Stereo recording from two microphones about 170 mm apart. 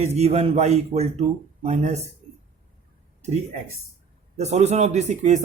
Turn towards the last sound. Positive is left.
turn(degrees=-45)  # may be behind; listen again after turning